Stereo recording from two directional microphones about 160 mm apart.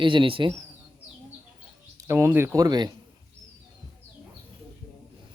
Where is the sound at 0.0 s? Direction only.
30° right (ahead or behind).